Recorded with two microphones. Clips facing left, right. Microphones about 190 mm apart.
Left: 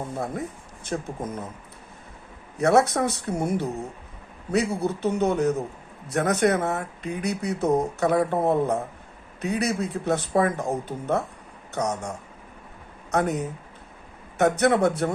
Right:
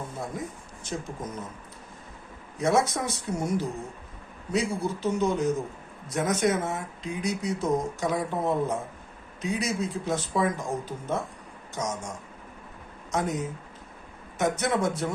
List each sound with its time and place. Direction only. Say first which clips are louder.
0.9 s speech: left 4 dB; 60° left (ahead or behind)
2.6 s speech: left 5 dB; 65° left (ahead or behind)